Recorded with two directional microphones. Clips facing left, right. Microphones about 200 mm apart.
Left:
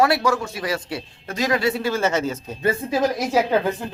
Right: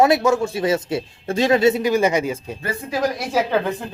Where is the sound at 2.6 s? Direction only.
25° left (ahead or behind).